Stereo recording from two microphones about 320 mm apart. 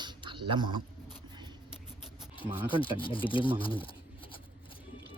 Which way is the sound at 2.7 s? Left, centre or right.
Centre.